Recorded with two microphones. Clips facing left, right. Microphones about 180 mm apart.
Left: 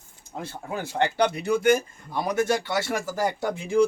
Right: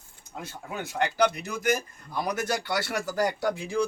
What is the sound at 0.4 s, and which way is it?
Speech, 30° left (ahead or behind).